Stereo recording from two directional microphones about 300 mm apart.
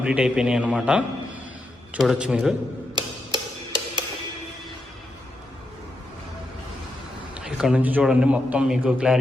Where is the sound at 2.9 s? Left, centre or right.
Centre.